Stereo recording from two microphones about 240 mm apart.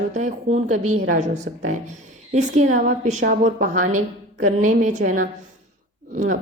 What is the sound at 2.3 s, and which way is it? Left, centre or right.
A woman's voice, right.